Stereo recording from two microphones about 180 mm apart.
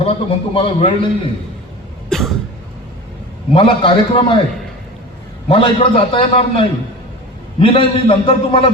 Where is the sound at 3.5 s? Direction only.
30° left (ahead or behind).